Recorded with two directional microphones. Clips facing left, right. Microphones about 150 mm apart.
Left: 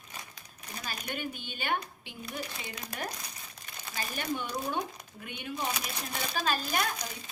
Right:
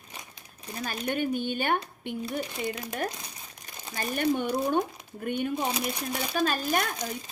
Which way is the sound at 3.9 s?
50° right (ahead or behind).